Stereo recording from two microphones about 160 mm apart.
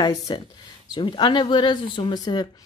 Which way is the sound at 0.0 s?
25° left (ahead or behind).